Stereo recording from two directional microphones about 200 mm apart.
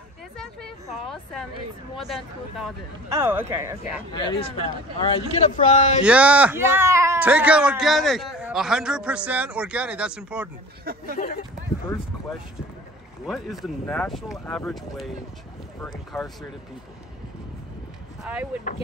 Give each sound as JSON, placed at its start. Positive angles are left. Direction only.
{"t": 0.4, "sound": "a sound", "side_deg": 0}
{"t": 2.0, "sound": "speech", "side_deg": 0}
{"t": 3.1, "sound": "speech", "side_deg": -10}
{"t": 4.1, "sound": "speech", "side_deg": 25}
{"t": 5.3, "sound": "speech", "side_deg": 40}
{"t": 6.0, "sound": "speech", "side_deg": -5}
{"t": 11.1, "sound": "speech", "side_deg": 40}
{"t": 13.3, "sound": "speech", "side_deg": 0}
{"t": 18.2, "sound": "speech", "side_deg": -5}